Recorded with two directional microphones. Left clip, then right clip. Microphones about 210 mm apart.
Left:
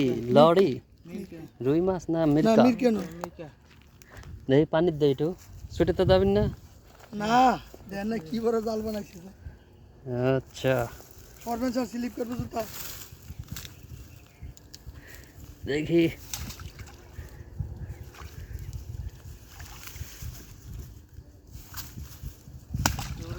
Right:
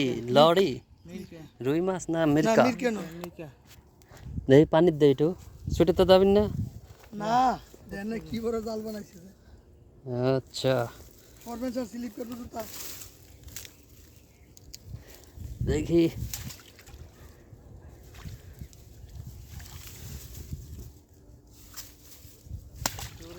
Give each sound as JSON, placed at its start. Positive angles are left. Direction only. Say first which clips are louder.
{"t": 0.0, "sound": "speech", "louder": "left 1 dB", "side_deg": 0}
{"t": 2.6, "sound": "speech", "louder": "left 4 dB", "side_deg": 40}
{"t": 4.4, "sound": "speech", "louder": "right 3 dB", "side_deg": -45}
{"t": 7.2, "sound": "speech", "louder": "left 3 dB", "side_deg": 30}
{"t": 10.1, "sound": "speech", "louder": "left 1 dB", "side_deg": -15}
{"t": 11.4, "sound": "speech", "louder": "left 4 dB", "side_deg": 25}
{"t": 15.6, "sound": "speech", "louder": "even", "side_deg": -25}
{"t": 16.3, "sound": "a sound", "louder": "left 3 dB", "side_deg": -5}
{"t": 22.8, "sound": "a sound", "louder": "left 4 dB", "side_deg": -10}